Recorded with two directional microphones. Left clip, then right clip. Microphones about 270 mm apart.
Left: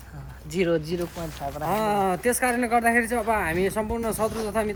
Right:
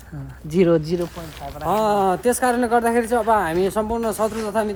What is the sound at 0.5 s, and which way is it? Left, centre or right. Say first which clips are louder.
Speech: right 7 dB; right.